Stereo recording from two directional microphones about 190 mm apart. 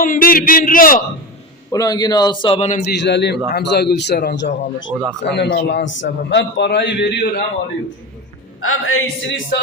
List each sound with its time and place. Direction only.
0.0 s a man's voice: 50° left (ahead or behind)
1.7 s a man's voice: 20° left (ahead or behind); by 2.8 s 35° left (ahead or behind)
3.0 s a man's voice: 65° left (ahead or behind)
8.6 s speech: 90° left